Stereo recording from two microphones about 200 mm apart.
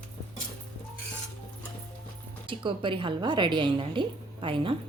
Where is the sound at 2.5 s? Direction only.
25° right (ahead or behind).